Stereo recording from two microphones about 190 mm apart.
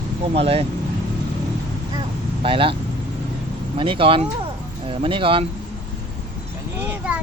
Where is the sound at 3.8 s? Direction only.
25° right (ahead or behind).